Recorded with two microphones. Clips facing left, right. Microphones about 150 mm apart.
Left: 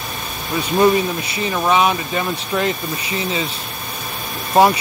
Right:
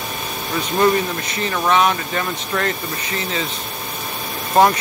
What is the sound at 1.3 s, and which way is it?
Speech, 10° left (ahead or behind).